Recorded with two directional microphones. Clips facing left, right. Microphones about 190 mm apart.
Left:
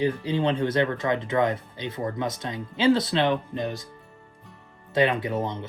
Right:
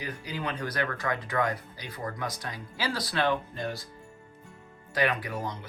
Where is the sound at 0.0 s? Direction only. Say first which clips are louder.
Left 11 dB; 25° left (ahead or behind).